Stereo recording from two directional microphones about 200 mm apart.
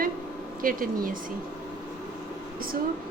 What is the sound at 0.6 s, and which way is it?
Speech, 45° right (ahead or behind).